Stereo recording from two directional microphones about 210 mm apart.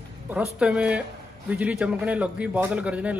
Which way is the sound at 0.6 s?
5° right (ahead or behind).